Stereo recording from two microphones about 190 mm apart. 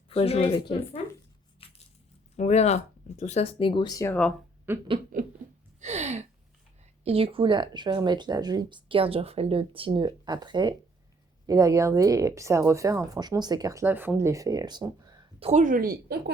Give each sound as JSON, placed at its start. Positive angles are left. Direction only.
{"t": 0.1, "sound": "speech", "side_deg": 30}
{"t": 1.6, "sound": "a sound", "side_deg": 30}
{"t": 2.3, "sound": "speech", "side_deg": 35}
{"t": 4.7, "sound": "speech", "side_deg": -10}
{"t": 5.1, "sound": "speech", "side_deg": -45}
{"t": 5.8, "sound": "a sound", "side_deg": -35}
{"t": 7.0, "sound": "speech", "side_deg": -30}
{"t": 15.4, "sound": "speech", "side_deg": -40}